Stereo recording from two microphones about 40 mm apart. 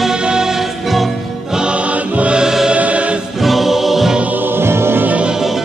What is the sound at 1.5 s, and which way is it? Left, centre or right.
Music, right.